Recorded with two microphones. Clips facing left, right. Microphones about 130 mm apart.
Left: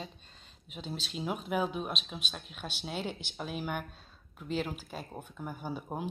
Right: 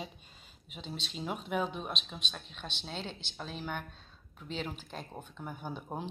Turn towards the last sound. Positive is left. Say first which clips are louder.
# left 2 dB
turn(degrees=5)  # may be behind; listen again after turning